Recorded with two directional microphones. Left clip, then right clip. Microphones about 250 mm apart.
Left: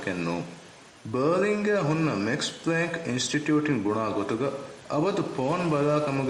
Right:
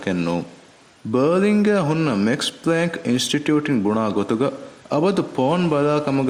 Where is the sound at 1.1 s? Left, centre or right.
Right.